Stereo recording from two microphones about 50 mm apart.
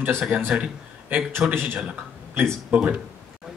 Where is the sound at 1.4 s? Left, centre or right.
Centre.